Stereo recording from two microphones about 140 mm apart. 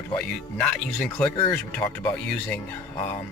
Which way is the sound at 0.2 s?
5° left (ahead or behind).